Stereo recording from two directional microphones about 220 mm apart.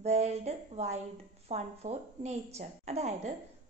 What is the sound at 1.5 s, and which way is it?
A woman's voice, 30° right (ahead or behind).